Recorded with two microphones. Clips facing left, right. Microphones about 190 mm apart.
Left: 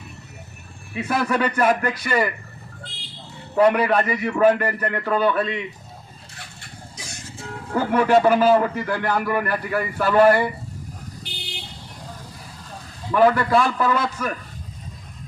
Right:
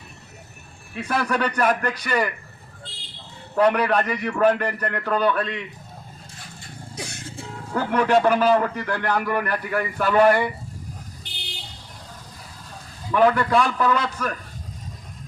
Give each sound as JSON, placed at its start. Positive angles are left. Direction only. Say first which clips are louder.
{"t": 0.9, "sound": "a man's voice", "louder": "left 2 dB", "side_deg": 10}
{"t": 3.5, "sound": "a man's voice", "louder": "left 2 dB", "side_deg": 10}
{"t": 6.9, "sound": "music", "louder": "right 6 dB", "side_deg": -60}
{"t": 7.8, "sound": "a man's voice", "louder": "left 2 dB", "side_deg": 10}
{"t": 13.1, "sound": "a man's voice", "louder": "left 1 dB", "side_deg": 5}